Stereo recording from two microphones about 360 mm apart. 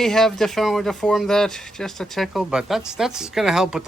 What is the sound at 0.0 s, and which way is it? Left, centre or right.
Speech, centre.